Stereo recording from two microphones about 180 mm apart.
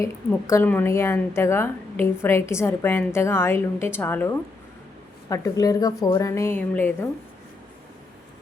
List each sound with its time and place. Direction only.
0.3 s a woman's voice: 15° left (ahead or behind)